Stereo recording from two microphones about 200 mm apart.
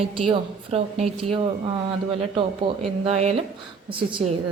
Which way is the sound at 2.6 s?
30° right (ahead or behind).